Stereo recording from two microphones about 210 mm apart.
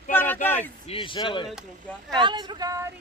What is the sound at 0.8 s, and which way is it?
Speech, 25° left (ahead or behind).